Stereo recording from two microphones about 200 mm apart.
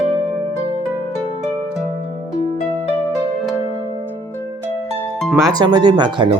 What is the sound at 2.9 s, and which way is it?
Music, 10° left (ahead or behind).